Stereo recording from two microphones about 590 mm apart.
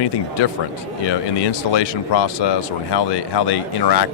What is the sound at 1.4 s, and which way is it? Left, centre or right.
Speech, left.